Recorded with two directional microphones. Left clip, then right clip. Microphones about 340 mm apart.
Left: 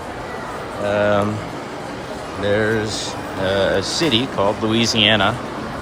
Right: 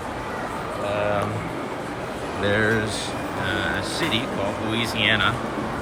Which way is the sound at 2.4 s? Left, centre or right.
Centre.